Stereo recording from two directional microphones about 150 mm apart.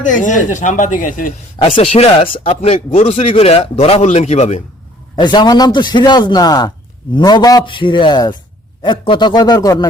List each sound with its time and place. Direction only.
0.0 s speech: 55° left (ahead or behind)
1.6 s speech: 35° left (ahead or behind)
5.1 s a man's voice: 30° left (ahead or behind)